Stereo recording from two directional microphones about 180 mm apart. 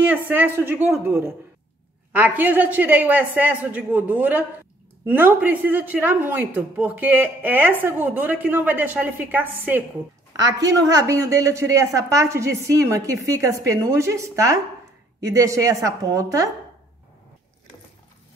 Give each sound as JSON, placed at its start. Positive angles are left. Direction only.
{"t": 0.0, "sound": "a woman's voice", "side_deg": -10}